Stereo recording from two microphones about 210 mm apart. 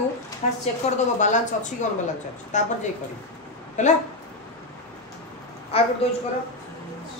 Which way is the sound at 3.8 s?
35° left (ahead or behind).